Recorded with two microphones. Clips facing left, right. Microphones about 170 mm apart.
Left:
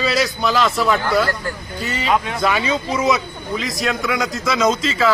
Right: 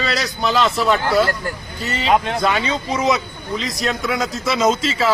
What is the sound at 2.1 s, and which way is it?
Speech, 55° right (ahead or behind).